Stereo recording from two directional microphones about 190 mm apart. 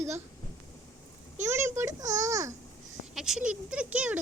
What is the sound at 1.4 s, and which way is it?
A child's voice, 15° right (ahead or behind).